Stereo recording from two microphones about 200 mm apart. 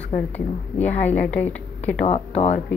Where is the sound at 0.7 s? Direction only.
5° left (ahead or behind).